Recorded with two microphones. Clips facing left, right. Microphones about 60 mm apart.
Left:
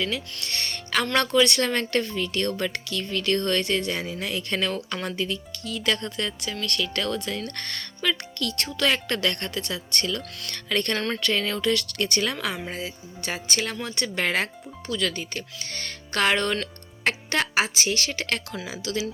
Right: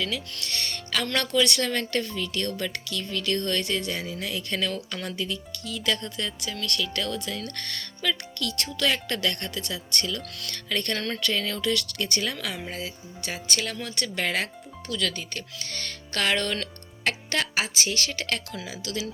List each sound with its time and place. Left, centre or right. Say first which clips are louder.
0.4 s music: left 1 dB; left
1.1 s speech: left 3 dB; left
12.5 s speech: left 2 dB; centre
13.5 s speech: left 1 dB; left
14.8 s music: left 2 dB; left
17.0 s speech: left 2 dB; left